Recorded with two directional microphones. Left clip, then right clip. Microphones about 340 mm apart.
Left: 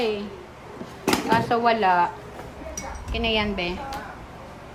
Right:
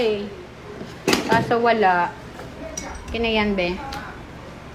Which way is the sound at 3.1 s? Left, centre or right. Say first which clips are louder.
Right 3 dB; centre.